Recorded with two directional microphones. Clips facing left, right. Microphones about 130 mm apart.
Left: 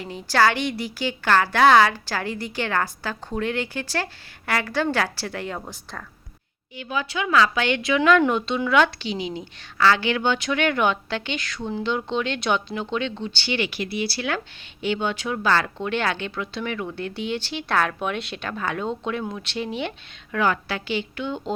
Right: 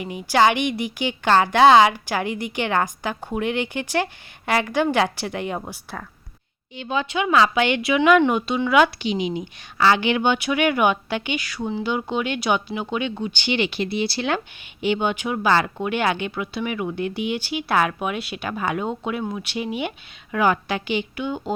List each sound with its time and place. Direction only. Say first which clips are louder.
0.0 s a woman's voice: right 2 dB; 15° right (ahead or behind)
6.7 s a woman's voice: right 3 dB; 25° right (ahead or behind); by 21.5 s 5° right (ahead or behind)